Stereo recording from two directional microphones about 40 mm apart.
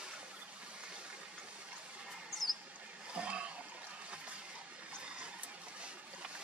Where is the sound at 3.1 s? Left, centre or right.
Right.